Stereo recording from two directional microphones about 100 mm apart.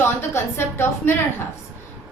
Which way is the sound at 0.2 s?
25° left (ahead or behind).